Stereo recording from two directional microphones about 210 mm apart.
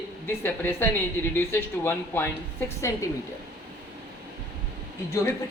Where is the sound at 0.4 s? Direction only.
10° left (ahead or behind).